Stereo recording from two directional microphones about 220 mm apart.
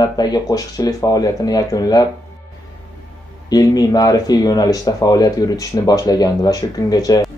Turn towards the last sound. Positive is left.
turn(degrees=15)  # may be behind; listen again after turning